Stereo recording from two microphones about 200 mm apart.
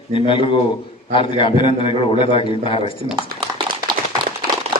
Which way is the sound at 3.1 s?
20° right (ahead or behind).